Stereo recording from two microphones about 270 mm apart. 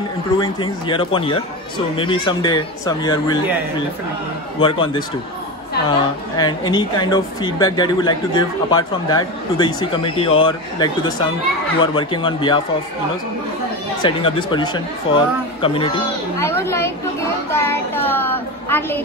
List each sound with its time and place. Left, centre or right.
0.4 s a woman's voice: centre
4.6 s a man's voice: centre
14.0 s a woman's voice: centre